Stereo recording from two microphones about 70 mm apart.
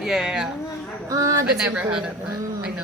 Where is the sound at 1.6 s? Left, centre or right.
Centre.